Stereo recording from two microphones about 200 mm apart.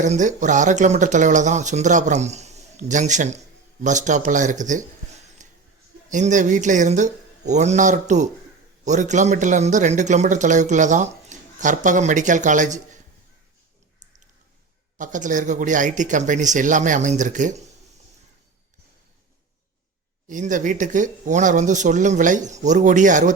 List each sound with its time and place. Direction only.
0.0 s speech: 40° right (ahead or behind)
5.4 s a sound: 35° right (ahead or behind)
6.1 s speech: 40° right (ahead or behind)
14.9 s speech: 40° right (ahead or behind)
20.2 s speech: 40° right (ahead or behind)